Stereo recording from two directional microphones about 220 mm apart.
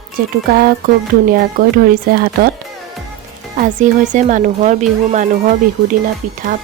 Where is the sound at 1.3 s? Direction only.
40° right (ahead or behind).